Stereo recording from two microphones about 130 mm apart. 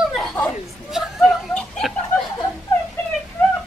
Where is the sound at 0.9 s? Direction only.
5° right (ahead or behind).